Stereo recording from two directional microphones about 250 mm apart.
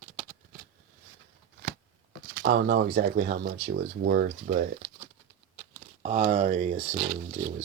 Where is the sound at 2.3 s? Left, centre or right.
Right.